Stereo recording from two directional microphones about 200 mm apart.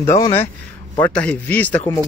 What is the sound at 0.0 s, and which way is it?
A man's voice, 15° left (ahead or behind).